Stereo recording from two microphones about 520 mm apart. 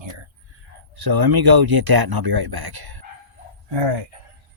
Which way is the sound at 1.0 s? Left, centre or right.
Right.